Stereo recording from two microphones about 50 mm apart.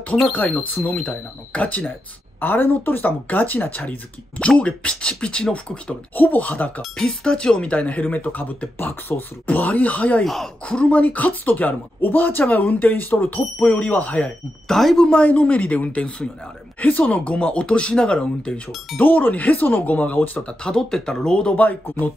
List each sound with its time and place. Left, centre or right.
0.3 s speech: left
2.4 s speech: left
4.4 s speech: left
6.1 s speech: left
7.0 s speech: centre; by 8.6 s left
8.7 s speech: left
9.5 s speech: left
10.2 s speech: centre
10.6 s speech: left
14.7 s speech: centre
15.0 s speech: left
18.9 s speech: left
20.6 s speech: centre